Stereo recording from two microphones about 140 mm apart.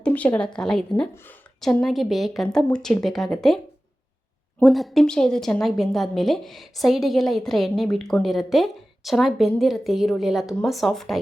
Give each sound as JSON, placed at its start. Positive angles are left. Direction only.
{"t": 0.0, "sound": "a woman's voice", "side_deg": 10}
{"t": 1.1, "sound": "a woman's voice", "side_deg": 15}
{"t": 1.6, "sound": "a woman's voice", "side_deg": 0}
{"t": 4.6, "sound": "a woman's voice", "side_deg": 0}